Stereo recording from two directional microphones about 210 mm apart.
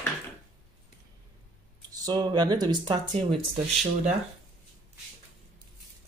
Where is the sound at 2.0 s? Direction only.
20° right (ahead or behind).